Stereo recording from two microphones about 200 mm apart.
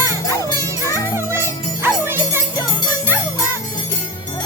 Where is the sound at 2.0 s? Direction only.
10° right (ahead or behind).